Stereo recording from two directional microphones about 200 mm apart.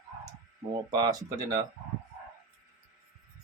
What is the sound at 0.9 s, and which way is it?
Speech, 20° right (ahead or behind).